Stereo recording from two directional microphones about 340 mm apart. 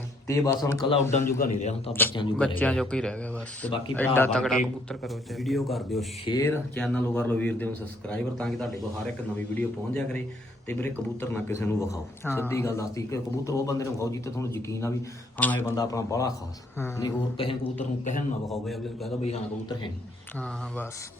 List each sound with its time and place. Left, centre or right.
0.3 s a man's voice: centre
18.4 s speech: centre
19.2 s a man's voice: centre